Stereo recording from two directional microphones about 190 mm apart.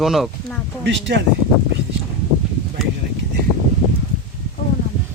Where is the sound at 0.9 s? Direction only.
70° right (ahead or behind).